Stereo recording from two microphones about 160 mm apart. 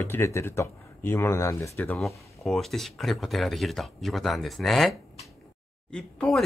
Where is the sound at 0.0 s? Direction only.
15° left (ahead or behind).